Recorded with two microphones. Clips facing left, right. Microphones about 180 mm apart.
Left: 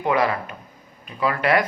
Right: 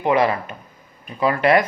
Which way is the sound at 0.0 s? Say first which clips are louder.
Right 3 dB; 20° right (ahead or behind).